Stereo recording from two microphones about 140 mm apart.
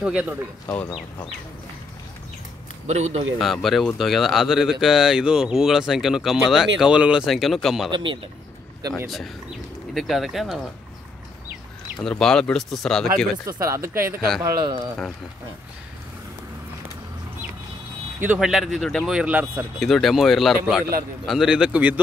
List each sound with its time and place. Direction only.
0.0 s speech: 10° right (ahead or behind)
2.9 s a man's voice: 50° right (ahead or behind)
3.3 s speech: centre (ahead or behind)
7.9 s speech: 35° right (ahead or behind)
9.0 s speech: centre (ahead or behind)
12.0 s speech: 5° left (ahead or behind)
13.5 s speech: 20° right (ahead or behind)
14.4 s speech: 30° right (ahead or behind)
18.2 s speech: 10° right (ahead or behind)
19.8 s speech: centre (ahead or behind)